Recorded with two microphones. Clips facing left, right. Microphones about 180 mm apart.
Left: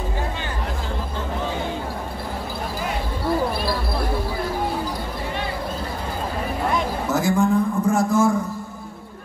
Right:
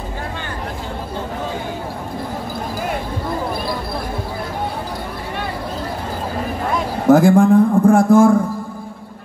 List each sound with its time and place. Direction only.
7.1 s a man's voice: 55° right (ahead or behind)